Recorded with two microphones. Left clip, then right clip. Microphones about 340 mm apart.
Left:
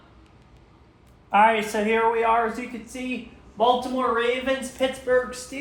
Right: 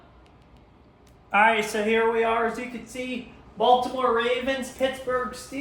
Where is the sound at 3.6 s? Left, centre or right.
Left.